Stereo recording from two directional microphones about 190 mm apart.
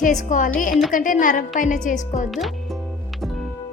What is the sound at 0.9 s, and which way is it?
A woman's voice, 45° left (ahead or behind).